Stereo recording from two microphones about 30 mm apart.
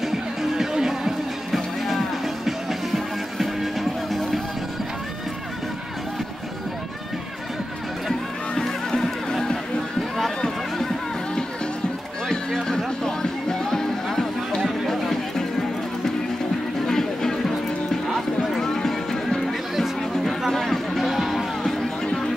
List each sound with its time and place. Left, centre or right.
0.0 s music: centre
1.5 s music: centre
8.5 s music: centre
12.3 s music: centre
14.9 s music: centre
16.8 s music: centre
20.5 s music: centre
22.0 s a sound: left